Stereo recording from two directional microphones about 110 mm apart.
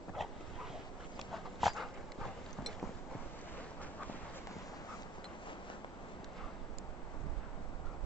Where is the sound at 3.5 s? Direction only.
15° left (ahead or behind).